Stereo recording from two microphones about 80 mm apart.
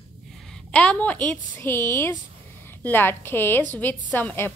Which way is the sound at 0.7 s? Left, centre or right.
Centre.